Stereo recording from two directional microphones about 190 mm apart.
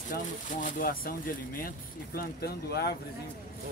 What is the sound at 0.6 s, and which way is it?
Speech, 50° left (ahead or behind).